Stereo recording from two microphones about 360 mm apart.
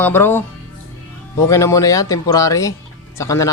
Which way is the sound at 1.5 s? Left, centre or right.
Centre.